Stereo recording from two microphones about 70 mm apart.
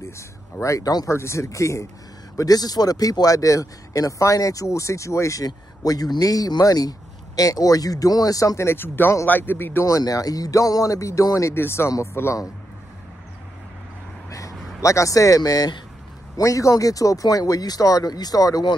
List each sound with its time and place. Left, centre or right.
0.6 s speech: left
2.3 s speech: left
5.4 s speech: left
8.5 s a man's voice: left
9.8 s speech: left
11.5 s a man's voice: left
14.8 s speech: left
16.3 s speech: left